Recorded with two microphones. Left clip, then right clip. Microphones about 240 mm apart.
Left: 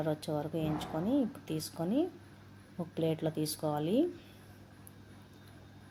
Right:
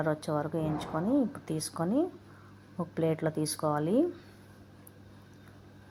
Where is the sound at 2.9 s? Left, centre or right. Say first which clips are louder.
Right 3 dB; right.